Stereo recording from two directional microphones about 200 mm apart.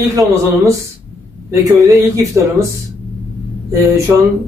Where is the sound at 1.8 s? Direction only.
15° right (ahead or behind).